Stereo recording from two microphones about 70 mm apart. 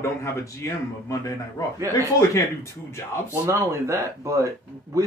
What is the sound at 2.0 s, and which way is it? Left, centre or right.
A man's voice, left.